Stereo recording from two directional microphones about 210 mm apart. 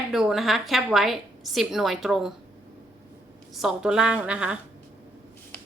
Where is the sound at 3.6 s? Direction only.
5° right (ahead or behind).